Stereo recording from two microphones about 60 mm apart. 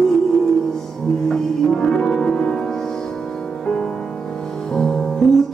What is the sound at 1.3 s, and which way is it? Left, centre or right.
Music, centre.